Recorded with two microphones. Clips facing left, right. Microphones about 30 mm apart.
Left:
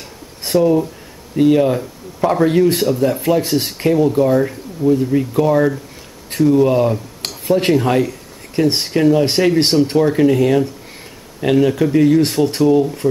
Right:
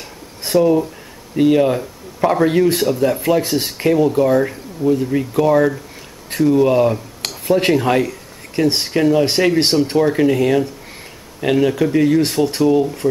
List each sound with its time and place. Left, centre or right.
0.5 s speech: centre